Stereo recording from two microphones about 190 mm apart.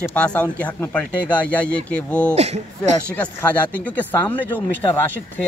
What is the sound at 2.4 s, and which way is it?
Speech, 35° right (ahead or behind).